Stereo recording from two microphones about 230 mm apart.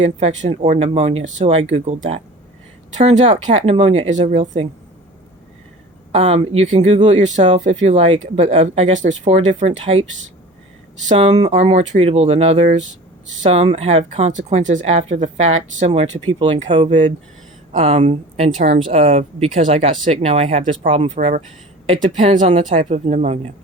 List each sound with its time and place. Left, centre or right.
0.2 s speech: right
2.9 s speech: right
6.1 s speech: right